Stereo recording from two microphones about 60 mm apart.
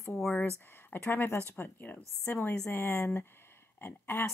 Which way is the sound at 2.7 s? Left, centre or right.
Left.